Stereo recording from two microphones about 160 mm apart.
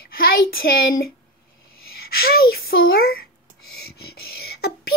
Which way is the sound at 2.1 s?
70° left (ahead or behind).